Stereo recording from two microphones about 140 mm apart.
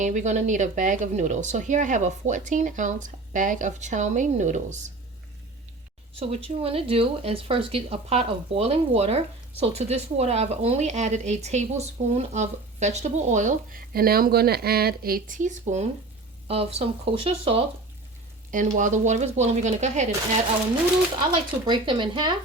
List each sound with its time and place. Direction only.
0.0 s speech: 60° right (ahead or behind)
6.1 s speech: 45° right (ahead or behind)
16.5 s speech: 45° right (ahead or behind)
18.5 s speech: 65° right (ahead or behind)
21.7 s speech: 35° right (ahead or behind)